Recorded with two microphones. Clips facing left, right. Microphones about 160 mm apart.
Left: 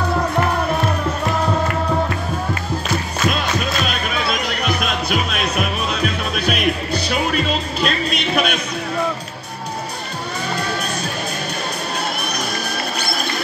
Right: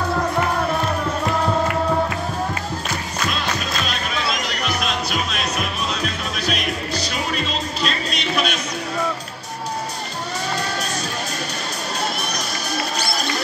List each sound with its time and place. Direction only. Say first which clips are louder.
3.3 s music: left 6 dB; 55° left (ahead or behind)